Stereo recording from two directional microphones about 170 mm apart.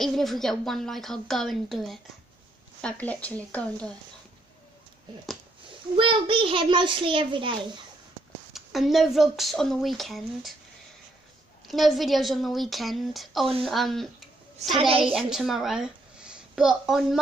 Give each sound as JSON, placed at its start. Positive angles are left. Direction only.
{"t": 0.0, "sound": "a woman's voice", "side_deg": 0}
{"t": 5.9, "sound": "a child's voice", "side_deg": -30}
{"t": 8.5, "sound": "a woman's voice", "side_deg": 0}
{"t": 11.6, "sound": "a woman's voice", "side_deg": 0}
{"t": 14.8, "sound": "a woman's voice", "side_deg": -30}
{"t": 15.1, "sound": "speech", "side_deg": 0}